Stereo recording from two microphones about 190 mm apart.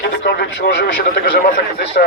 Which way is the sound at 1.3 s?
55° left (ahead or behind).